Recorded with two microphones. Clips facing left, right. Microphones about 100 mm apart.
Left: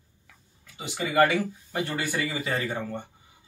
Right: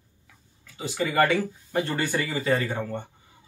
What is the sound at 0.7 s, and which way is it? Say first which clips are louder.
Speech: even; 15° left (ahead or behind).